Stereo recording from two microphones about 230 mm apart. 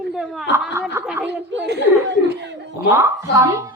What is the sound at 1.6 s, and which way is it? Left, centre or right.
Speech, right.